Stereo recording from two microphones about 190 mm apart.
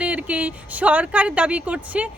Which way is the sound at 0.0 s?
5° right (ahead or behind).